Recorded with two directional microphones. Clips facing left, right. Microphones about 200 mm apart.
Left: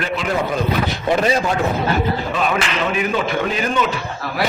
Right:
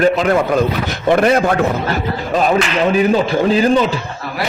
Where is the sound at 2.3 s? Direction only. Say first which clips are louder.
Right 6 dB; 40° right (ahead or behind).